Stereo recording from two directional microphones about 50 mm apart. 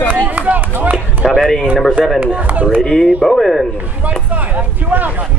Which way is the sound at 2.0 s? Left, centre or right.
Centre.